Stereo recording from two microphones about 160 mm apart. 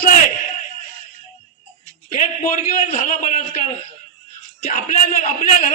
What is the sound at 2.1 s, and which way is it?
A man's voice, 45° left (ahead or behind).